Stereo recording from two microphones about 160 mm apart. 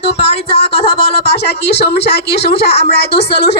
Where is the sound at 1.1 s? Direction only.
90° left.